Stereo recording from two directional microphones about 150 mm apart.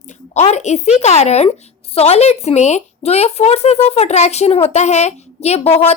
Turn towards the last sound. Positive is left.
turn(degrees=45)  # may be behind; listen again after turning